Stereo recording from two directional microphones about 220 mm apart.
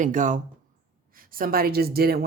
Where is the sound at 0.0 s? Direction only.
35° right (ahead or behind).